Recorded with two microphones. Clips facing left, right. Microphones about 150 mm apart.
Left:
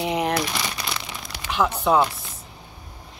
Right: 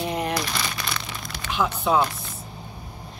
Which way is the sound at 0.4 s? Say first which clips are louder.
Left 2 dB; 10° left (ahead or behind).